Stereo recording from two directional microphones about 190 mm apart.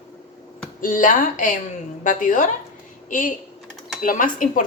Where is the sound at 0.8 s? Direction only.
45° left (ahead or behind).